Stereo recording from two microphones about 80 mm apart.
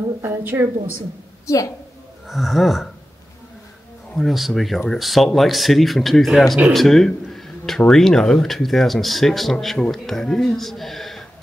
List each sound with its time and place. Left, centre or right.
0.2 s a woman's voice: right
1.5 s a woman's voice: left
2.2 s speech: centre
4.1 s speech: centre